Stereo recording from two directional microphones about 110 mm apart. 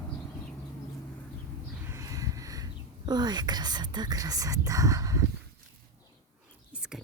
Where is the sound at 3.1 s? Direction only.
40° right (ahead or behind).